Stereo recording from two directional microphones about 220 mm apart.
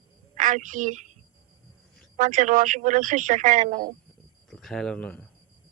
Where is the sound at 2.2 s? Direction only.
35° right (ahead or behind).